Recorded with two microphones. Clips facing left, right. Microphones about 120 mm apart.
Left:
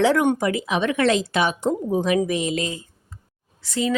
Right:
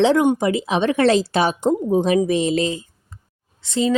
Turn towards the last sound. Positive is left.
turn(degrees=-25)  # may be behind; listen again after turning